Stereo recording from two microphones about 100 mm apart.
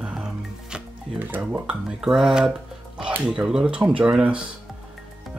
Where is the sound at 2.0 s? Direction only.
5° right (ahead or behind).